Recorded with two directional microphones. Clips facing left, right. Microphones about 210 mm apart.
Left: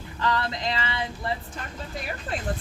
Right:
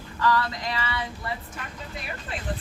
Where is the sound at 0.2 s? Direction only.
25° left (ahead or behind).